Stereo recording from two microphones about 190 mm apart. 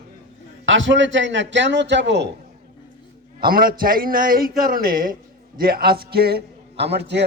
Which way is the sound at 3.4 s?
50° right (ahead or behind).